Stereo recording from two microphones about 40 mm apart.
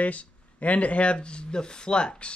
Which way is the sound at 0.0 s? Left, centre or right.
Left.